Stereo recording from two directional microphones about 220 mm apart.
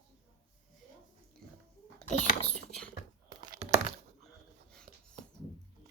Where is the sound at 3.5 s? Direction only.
35° right (ahead or behind).